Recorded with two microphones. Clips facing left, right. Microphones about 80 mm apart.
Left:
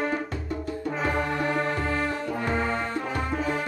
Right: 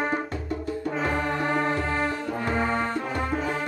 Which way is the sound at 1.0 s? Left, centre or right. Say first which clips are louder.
Left 1 dB; centre.